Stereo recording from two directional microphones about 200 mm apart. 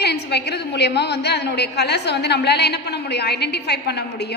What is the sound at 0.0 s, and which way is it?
A woman's voice, 55° left (ahead or behind).